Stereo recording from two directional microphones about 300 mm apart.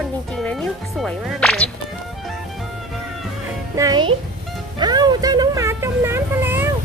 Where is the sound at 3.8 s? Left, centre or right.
Centre.